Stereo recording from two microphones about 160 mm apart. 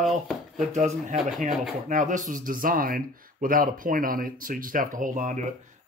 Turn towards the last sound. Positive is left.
turn(degrees=-50)  # may be behind; listen again after turning